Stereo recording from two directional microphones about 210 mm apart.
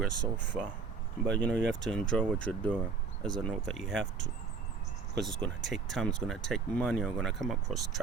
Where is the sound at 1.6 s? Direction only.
55° right (ahead or behind).